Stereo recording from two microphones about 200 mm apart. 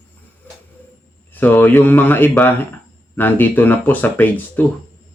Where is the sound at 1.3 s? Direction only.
10° left (ahead or behind).